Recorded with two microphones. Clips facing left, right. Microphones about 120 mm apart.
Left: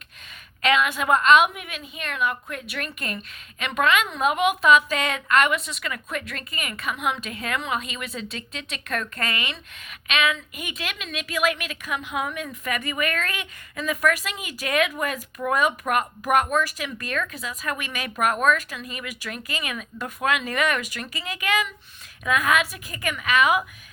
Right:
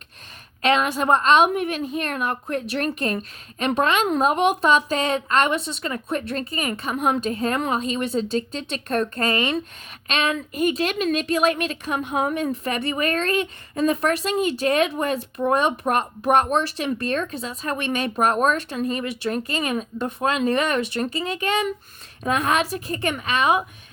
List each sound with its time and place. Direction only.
0.6 s a woman's voice: 35° right (ahead or behind)